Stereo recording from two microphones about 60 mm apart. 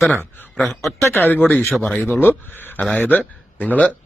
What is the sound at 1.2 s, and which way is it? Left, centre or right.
Speech, left.